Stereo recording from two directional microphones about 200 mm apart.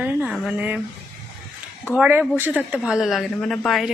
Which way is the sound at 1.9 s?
5° right (ahead or behind).